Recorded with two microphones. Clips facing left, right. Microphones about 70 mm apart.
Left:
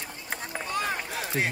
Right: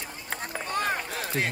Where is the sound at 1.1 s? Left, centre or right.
Centre.